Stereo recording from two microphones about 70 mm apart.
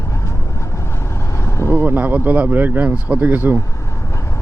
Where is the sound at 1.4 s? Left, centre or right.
Left.